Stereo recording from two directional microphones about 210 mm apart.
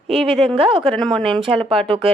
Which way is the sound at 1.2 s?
25° right (ahead or behind).